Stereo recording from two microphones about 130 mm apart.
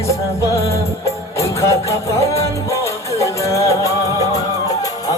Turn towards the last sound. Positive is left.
turn(degrees=25)  # may be behind; listen again after turning